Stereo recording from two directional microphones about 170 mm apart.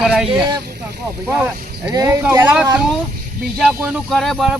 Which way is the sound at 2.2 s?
10° right (ahead or behind).